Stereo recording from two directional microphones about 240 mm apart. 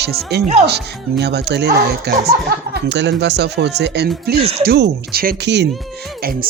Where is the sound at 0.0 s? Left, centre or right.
Right.